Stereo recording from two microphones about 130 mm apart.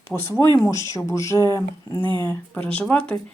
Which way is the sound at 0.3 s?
20° left (ahead or behind).